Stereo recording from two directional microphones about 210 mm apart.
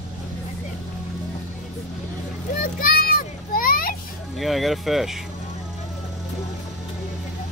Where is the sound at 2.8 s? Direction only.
45° left (ahead or behind).